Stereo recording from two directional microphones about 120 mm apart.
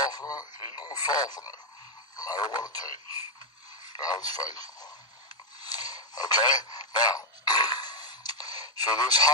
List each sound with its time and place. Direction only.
0.0 s speech: 35° left (ahead or behind)
3.9 s speech: 35° left (ahead or behind)
5.6 s radio: 35° left (ahead or behind)